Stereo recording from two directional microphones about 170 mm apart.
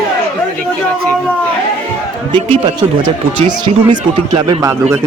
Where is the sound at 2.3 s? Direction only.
30° right (ahead or behind).